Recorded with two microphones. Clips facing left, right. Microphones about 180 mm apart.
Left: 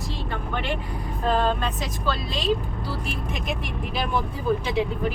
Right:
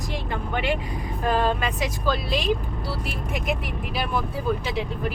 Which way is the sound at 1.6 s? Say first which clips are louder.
Right 2 dB; 10° right (ahead or behind).